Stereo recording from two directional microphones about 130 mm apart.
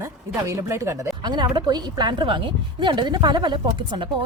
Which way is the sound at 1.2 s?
35° right (ahead or behind).